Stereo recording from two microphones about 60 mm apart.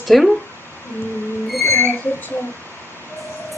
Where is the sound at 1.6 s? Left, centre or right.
Left.